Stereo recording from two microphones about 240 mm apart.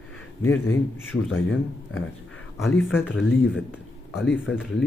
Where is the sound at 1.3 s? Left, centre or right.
Left.